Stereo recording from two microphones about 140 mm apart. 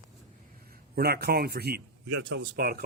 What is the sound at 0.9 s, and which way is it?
Speech, 90° right.